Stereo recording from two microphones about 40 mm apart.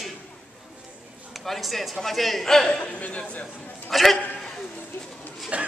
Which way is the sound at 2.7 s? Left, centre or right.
Left.